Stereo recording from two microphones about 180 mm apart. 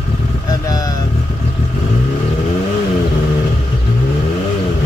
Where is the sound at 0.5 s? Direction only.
20° left (ahead or behind).